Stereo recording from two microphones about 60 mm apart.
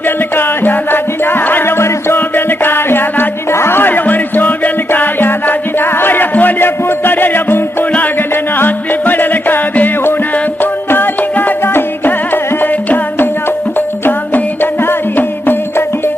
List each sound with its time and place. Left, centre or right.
0.3 s music: left